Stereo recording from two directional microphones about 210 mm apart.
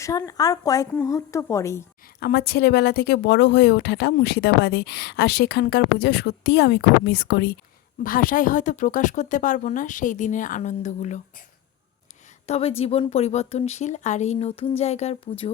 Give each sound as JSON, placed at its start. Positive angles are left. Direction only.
{"t": 0.0, "sound": "speech", "side_deg": 15}
{"t": 2.2, "sound": "a woman's voice", "side_deg": 50}
{"t": 12.5, "sound": "a woman's voice", "side_deg": 30}